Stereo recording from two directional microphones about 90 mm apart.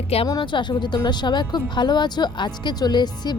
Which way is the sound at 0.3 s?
60° left (ahead or behind).